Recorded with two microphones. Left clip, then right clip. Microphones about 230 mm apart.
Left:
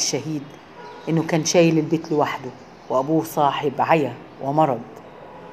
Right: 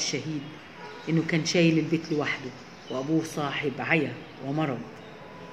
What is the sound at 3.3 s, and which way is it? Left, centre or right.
Speech, centre.